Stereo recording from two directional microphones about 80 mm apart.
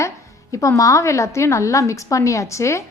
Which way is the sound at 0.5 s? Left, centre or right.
Left.